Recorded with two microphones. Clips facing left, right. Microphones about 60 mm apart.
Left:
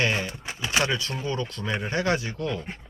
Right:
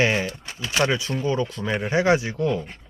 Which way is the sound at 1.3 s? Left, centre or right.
Centre.